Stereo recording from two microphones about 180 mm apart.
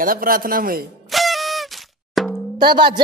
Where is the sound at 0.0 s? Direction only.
50° right (ahead or behind).